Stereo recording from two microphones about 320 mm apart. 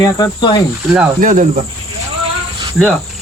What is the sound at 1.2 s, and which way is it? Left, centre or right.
Cricket, right.